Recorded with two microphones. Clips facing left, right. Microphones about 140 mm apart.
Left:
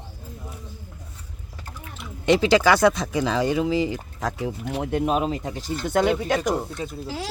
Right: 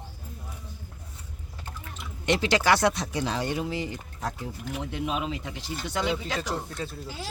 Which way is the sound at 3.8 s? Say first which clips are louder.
Left 7 dB; 90° left.